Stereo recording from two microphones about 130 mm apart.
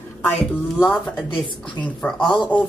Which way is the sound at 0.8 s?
Centre (ahead or behind).